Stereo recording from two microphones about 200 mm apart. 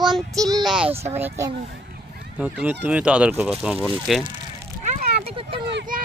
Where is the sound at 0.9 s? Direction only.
30° right (ahead or behind).